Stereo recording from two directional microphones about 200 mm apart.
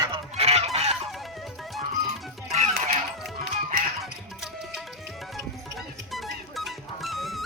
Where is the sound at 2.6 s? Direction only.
35° right (ahead or behind).